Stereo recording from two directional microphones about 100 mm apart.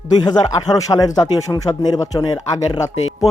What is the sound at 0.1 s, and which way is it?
Speech, 45° left (ahead or behind).